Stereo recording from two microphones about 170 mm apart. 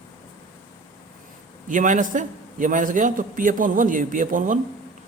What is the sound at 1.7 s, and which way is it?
A man's voice, 50° right (ahead or behind).